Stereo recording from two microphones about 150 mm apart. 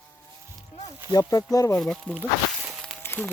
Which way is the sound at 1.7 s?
5° left (ahead or behind).